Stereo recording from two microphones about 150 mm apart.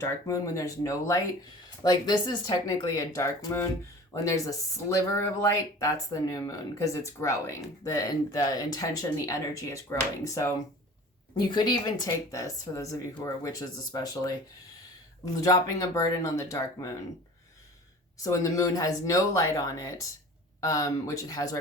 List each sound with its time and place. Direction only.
0.0 s speech: 20° left (ahead or behind)
18.2 s speech: 20° left (ahead or behind)